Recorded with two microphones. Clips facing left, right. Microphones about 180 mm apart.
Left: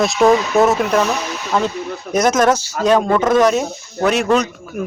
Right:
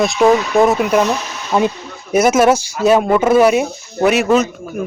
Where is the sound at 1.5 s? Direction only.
15° right (ahead or behind); by 4.9 s centre (ahead or behind).